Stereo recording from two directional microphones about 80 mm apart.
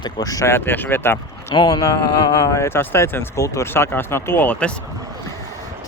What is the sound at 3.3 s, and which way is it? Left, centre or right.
Speech, left.